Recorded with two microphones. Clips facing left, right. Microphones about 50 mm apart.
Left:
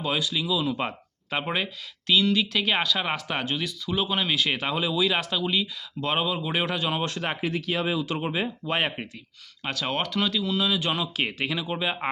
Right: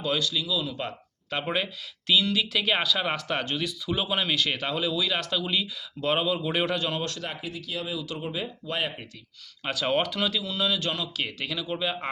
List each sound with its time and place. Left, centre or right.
0.0 s speech: centre
1.3 s speech: centre
6.9 s speech: left
7.2 s speech: left
9.6 s speech: centre
10.8 s speech: left